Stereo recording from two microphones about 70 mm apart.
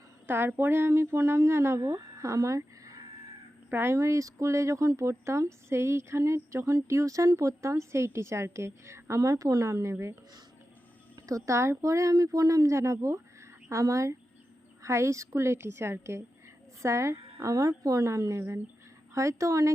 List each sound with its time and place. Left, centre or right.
0.3 s speech: right
3.7 s speech: right
11.3 s speech: right